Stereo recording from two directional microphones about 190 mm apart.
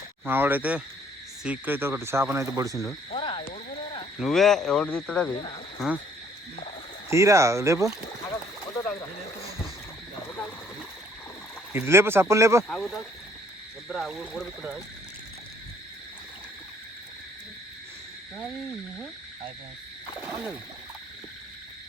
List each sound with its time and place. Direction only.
0.3 s speech: 10° right (ahead or behind)
3.1 s a sound: 25° left (ahead or behind)
4.2 s speech: centre (ahead or behind)
7.1 s speech: 15° right (ahead or behind)
11.7 s speech: 10° right (ahead or behind)
12.6 s speech: centre (ahead or behind)
20.2 s speech: 10° right (ahead or behind)